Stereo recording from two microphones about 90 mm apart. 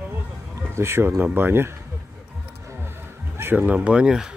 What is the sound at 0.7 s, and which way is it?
Speech, 30° right (ahead or behind).